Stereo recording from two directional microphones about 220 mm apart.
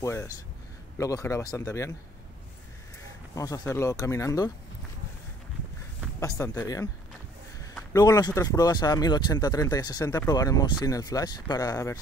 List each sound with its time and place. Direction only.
0.0 s speech: 15° left (ahead or behind)
3.3 s speech: 15° left (ahead or behind)
6.1 s speech: 15° left (ahead or behind)
7.9 s speech: 15° left (ahead or behind)